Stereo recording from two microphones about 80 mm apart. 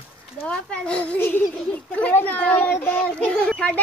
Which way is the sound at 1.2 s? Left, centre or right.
Left.